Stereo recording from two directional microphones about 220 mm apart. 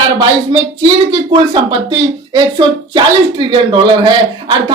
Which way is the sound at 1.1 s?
20° right (ahead or behind).